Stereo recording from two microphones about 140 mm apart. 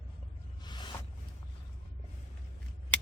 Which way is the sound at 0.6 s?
30° left (ahead or behind).